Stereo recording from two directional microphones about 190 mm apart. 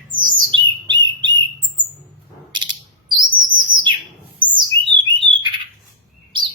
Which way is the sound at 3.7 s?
45° right (ahead or behind).